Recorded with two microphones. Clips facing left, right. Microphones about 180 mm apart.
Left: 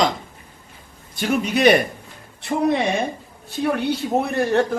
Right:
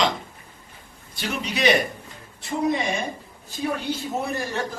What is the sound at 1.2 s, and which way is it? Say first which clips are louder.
Speech: left 7 dB; 50° left (ahead or behind).